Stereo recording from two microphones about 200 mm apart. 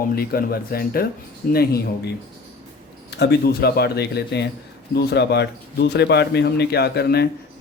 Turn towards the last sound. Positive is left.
turn(degrees=55)  # may be behind; listen again after turning